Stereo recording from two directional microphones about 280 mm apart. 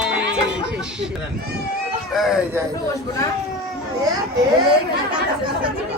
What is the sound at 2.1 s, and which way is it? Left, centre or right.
Speech, centre.